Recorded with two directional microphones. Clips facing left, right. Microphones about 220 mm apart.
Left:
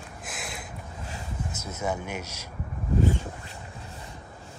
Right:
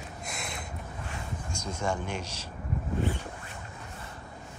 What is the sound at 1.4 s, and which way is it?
Speech, 5° left (ahead or behind).